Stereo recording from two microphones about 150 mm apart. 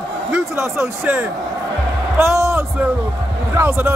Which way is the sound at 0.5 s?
15° right (ahead or behind).